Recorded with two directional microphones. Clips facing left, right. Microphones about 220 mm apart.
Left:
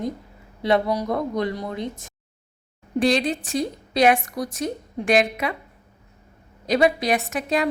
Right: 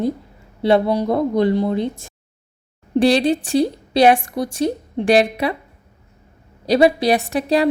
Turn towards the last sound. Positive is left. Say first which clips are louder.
# right 6 dB
turn(degrees=-35)  # may be behind; listen again after turning